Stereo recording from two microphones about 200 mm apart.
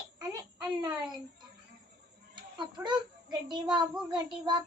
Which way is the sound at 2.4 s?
25° right (ahead or behind).